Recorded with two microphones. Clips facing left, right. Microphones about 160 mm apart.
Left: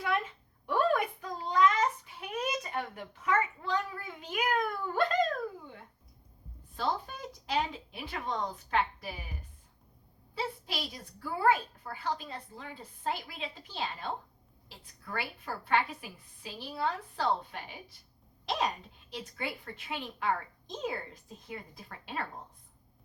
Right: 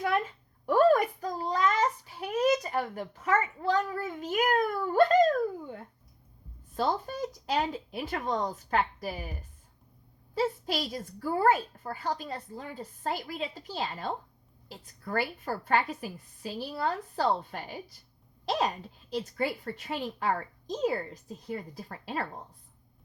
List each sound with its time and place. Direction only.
0.6 s a sound: 40° right (ahead or behind)
6.7 s a woman's voice: 45° right (ahead or behind)
10.3 s a woman's voice: 45° right (ahead or behind)
15.0 s a woman's voice: 45° right (ahead or behind)
19.1 s a woman's voice: 40° right (ahead or behind)